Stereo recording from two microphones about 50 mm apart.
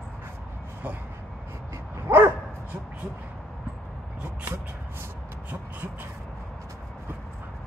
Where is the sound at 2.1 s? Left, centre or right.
Right.